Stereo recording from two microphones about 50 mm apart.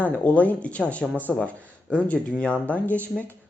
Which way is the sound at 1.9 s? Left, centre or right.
Left.